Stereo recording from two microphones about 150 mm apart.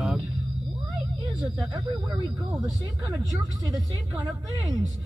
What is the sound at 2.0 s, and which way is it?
Speech, 35° right (ahead or behind).